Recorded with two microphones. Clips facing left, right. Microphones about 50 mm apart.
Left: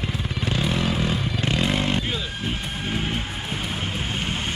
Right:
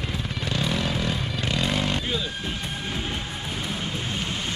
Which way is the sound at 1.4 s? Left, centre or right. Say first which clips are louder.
Left 2 dB; centre.